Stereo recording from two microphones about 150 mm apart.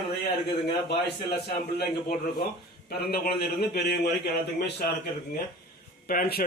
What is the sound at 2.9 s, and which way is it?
A man's voice, 90° left.